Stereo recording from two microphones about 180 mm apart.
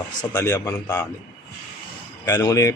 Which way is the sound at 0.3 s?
20° left (ahead or behind).